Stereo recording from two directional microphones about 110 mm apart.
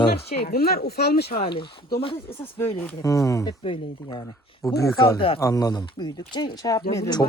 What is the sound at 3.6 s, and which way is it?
Speech, 55° left (ahead or behind).